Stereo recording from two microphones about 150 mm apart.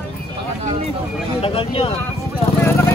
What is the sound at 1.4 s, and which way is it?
Speech, 40° left (ahead or behind).